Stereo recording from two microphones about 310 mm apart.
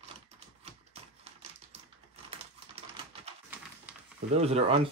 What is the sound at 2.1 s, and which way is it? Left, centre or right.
Typewriter, centre.